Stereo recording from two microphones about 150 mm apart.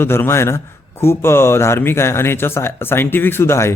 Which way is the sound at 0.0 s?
15° left (ahead or behind).